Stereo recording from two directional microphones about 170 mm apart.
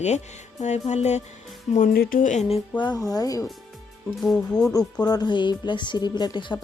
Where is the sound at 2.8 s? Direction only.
25° left (ahead or behind).